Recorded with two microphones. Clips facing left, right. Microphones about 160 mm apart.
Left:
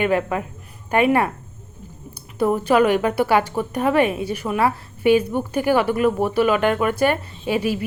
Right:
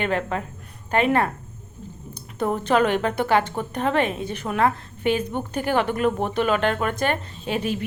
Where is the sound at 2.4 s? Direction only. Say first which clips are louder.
Left 4 dB; 10° left (ahead or behind).